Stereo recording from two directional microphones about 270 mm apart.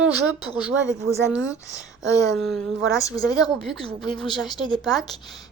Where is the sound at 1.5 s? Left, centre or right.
Centre.